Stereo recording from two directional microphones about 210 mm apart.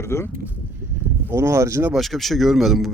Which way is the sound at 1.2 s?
10° right (ahead or behind).